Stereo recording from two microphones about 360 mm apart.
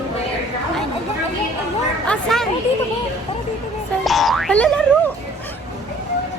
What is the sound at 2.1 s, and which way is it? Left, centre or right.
Speech, centre.